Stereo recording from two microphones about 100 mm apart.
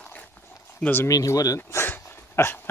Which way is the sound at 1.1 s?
35° left (ahead or behind).